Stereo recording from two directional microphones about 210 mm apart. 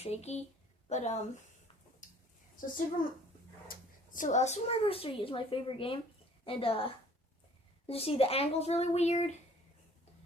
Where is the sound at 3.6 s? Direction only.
40° left (ahead or behind).